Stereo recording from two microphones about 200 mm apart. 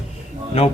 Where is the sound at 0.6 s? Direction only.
30° left (ahead or behind).